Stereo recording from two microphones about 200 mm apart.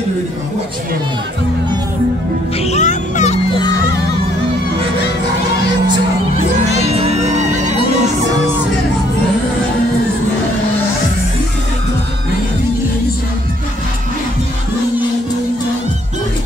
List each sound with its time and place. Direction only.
2.6 s music: 35° left (ahead or behind)
6.6 s music: 30° right (ahead or behind)